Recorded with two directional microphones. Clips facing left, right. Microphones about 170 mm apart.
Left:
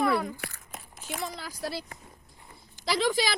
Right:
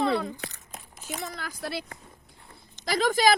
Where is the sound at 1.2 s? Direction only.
50° right (ahead or behind).